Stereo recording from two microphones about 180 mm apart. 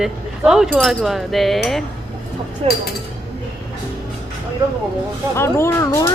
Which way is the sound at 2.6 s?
35° right (ahead or behind).